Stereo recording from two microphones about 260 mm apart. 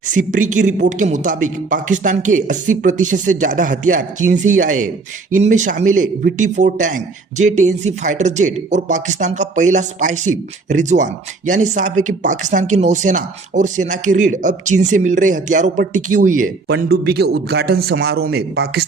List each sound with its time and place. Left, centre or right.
0.1 s speech: right